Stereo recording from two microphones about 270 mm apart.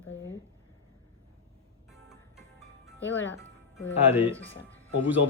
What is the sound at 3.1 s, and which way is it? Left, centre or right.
Speech, left.